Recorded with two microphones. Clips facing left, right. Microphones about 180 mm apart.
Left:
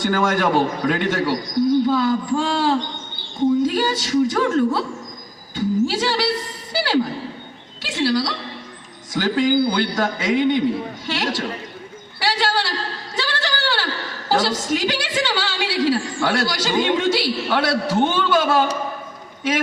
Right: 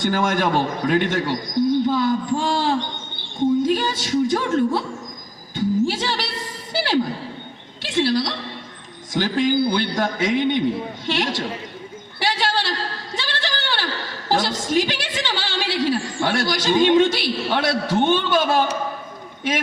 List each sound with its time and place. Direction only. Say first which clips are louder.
0.0 s a man's voice: left 1 dB; 20° right (ahead or behind)
6.7 s a sound: left 1 dB; 25° right (ahead or behind)
9.1 s a man's voice: left 1 dB; 20° right (ahead or behind)
12.2 s bird: left 1 dB; 20° right (ahead or behind)
13.1 s a sound: left 4 dB; 25° right (ahead or behind)
14.3 s a woman's voice: left 2 dB; 25° right (ahead or behind)